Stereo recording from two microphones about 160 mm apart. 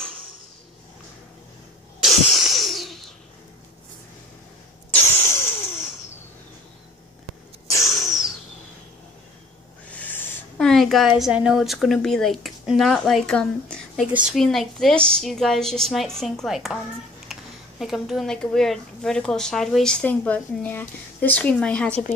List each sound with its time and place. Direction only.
2.0 s cough: centre (ahead or behind)
5.1 s vehicle: 15° left (ahead or behind)
7.7 s sneeze: 20° left (ahead or behind)
9.8 s a sound: 10° left (ahead or behind)
10.7 s speech: centre (ahead or behind)